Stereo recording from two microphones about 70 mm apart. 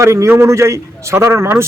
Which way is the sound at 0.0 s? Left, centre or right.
Right.